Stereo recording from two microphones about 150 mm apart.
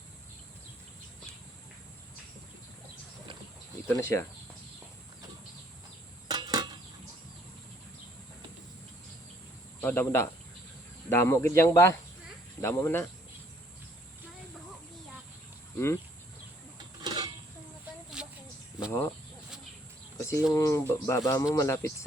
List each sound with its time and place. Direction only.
3.8 s speech: 20° left (ahead or behind)
6.2 s cricket: 30° right (ahead or behind)
9.8 s speech: 15° left (ahead or behind)
17.0 s a sound: 30° right (ahead or behind)
18.2 s a sound: 5° right (ahead or behind)
18.9 s speech: 15° left (ahead or behind)
20.5 s speech: 20° left (ahead or behind)